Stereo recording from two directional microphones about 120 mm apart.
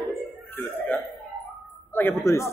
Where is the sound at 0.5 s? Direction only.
15° left (ahead or behind).